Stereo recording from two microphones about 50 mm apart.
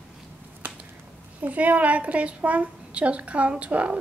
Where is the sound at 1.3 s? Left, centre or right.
Right.